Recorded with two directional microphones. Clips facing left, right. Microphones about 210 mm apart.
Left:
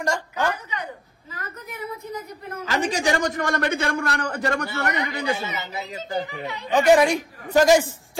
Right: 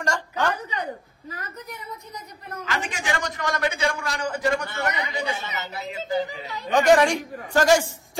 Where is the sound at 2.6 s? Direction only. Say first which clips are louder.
Left 7 dB; 40° left (ahead or behind); by 4.6 s 60° left (ahead or behind).